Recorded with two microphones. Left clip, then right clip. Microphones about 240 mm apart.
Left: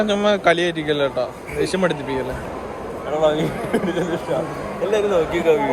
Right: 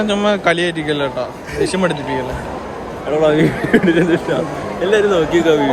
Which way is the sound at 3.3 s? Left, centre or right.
Right.